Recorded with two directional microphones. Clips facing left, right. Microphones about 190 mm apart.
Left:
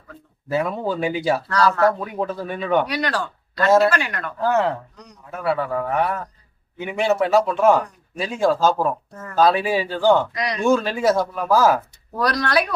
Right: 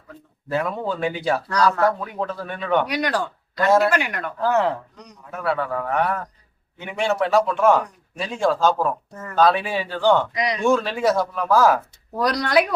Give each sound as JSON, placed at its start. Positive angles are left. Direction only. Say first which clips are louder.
{"t": 0.4, "sound": "a man's voice", "louder": "left 2 dB", "side_deg": 5}
{"t": 2.8, "sound": "speech", "louder": "right 1 dB", "side_deg": -15}
{"t": 4.4, "sound": "a man's voice", "louder": "left 1 dB", "side_deg": 0}
{"t": 10.3, "sound": "speech", "louder": "right 2 dB", "side_deg": -15}
{"t": 10.6, "sound": "speech", "louder": "left 2 dB", "side_deg": 0}
{"t": 12.2, "sound": "speech", "louder": "right 1 dB", "side_deg": -20}